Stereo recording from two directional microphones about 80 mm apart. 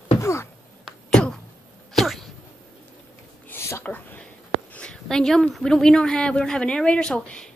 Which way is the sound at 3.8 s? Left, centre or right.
Left.